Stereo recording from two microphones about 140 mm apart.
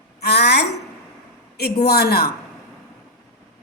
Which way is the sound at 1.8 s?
90° left.